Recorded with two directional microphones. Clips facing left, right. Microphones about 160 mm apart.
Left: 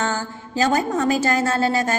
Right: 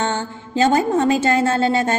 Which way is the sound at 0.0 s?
30° right (ahead or behind).